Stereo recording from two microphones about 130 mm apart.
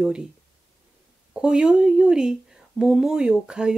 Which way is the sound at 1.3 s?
5° right (ahead or behind).